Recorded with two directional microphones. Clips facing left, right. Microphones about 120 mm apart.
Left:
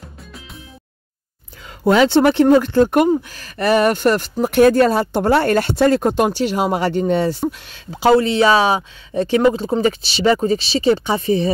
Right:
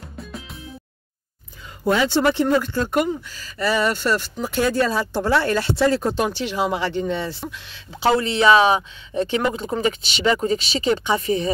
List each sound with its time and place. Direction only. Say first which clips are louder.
1.9 s speech: left 6 dB; 70° left (ahead or behind); by 11.5 s 30° left (ahead or behind)